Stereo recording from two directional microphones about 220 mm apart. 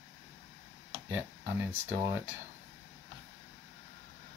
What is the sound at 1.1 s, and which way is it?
Speech, 10° right (ahead or behind).